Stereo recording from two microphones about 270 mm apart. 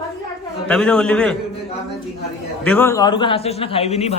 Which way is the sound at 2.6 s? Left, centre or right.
Centre.